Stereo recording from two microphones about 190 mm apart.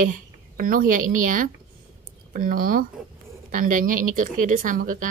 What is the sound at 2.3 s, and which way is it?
A woman's voice, 45° right (ahead or behind).